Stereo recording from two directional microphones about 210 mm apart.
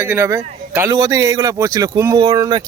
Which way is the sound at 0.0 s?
10° right (ahead or behind).